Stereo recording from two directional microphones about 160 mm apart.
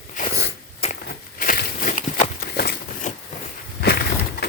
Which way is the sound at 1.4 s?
60° left (ahead or behind).